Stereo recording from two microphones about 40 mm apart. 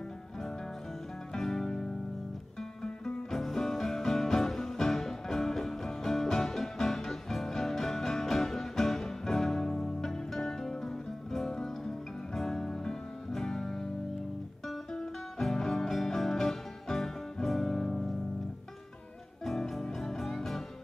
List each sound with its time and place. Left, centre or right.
1.4 s music: centre
2.8 s music: centre
15.0 s music: centre
19.4 s music: centre